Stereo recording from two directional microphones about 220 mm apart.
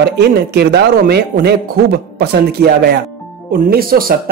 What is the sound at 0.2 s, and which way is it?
Speech, 50° right (ahead or behind).